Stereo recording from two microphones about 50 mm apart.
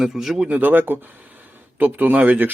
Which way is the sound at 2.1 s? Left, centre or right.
Right.